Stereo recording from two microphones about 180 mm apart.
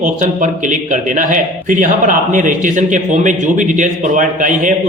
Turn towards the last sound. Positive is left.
turn(degrees=-45)  # may be behind; listen again after turning